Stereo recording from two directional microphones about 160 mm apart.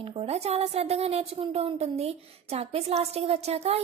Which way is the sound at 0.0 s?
35° right (ahead or behind).